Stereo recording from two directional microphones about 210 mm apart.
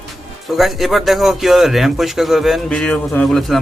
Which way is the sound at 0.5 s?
Centre (ahead or behind).